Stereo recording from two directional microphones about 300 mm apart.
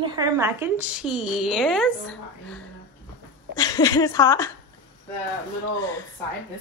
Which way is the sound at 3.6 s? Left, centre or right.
Centre.